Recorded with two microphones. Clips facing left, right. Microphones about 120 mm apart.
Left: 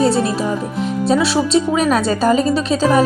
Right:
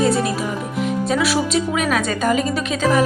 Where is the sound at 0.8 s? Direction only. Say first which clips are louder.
Left 3 dB; 30° left (ahead or behind).